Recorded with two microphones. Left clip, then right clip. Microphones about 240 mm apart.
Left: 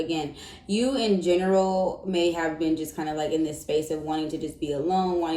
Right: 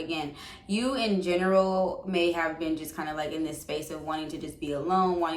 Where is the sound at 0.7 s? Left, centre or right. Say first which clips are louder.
Left 3 dB; centre.